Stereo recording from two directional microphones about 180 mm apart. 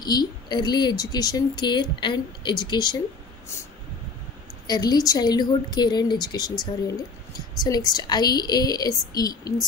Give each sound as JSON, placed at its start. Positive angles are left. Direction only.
{"t": 0.0, "sound": "a woman's voice", "side_deg": 25}
{"t": 4.6, "sound": "a woman's voice", "side_deg": 20}